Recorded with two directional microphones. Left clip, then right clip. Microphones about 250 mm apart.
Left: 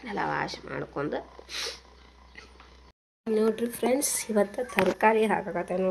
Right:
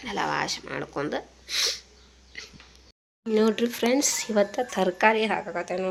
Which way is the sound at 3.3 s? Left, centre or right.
Centre.